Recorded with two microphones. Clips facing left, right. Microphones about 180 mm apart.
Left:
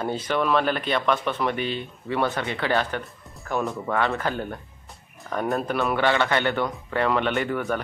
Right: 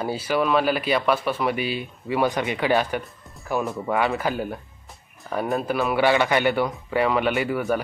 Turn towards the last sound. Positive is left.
turn(degrees=-10)  # may be behind; listen again after turning